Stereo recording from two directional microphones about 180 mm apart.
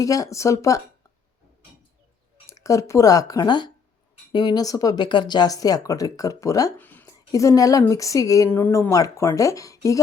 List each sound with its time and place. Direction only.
0.0 s speech: 20° left (ahead or behind)
2.5 s speech: 20° left (ahead or behind)